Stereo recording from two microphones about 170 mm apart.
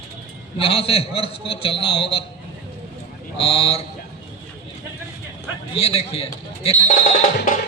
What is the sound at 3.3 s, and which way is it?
Speech, 35° left (ahead or behind).